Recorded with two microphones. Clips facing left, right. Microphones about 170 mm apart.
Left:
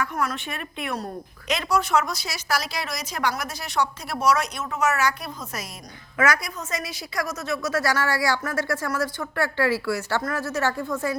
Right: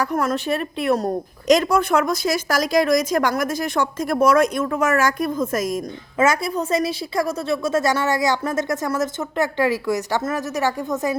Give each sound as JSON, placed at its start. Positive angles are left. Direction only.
{"t": 0.0, "sound": "a woman's voice", "side_deg": -40}
{"t": 6.1, "sound": "a woman's voice", "side_deg": -25}